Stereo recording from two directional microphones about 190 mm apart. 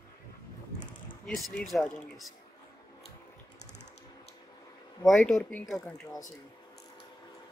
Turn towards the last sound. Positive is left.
turn(degrees=5)  # may be behind; listen again after turning